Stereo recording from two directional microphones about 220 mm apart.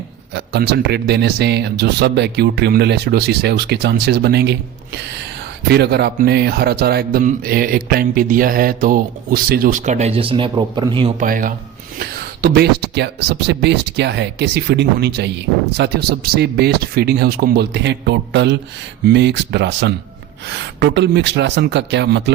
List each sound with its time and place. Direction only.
0.3 s speech: 50° right (ahead or behind)
5.6 s speech: 50° right (ahead or behind); by 11.1 s 20° right (ahead or behind)
11.2 s speech: 40° right (ahead or behind)